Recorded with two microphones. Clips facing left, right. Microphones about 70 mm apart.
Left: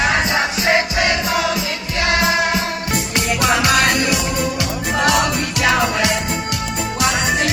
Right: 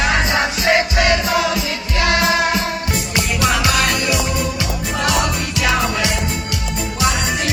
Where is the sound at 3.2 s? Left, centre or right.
Left.